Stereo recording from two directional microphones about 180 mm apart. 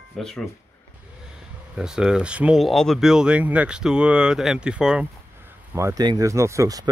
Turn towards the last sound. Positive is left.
turn(degrees=-20)  # may be behind; listen again after turning